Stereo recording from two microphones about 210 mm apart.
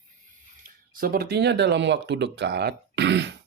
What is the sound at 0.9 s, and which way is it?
Speech, 45° right (ahead or behind).